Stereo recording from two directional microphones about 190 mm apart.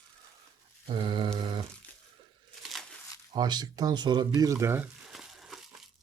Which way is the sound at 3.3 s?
20° right (ahead or behind).